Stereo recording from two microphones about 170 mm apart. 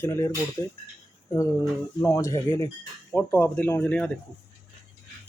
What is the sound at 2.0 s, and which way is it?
Speech, 20° left (ahead or behind).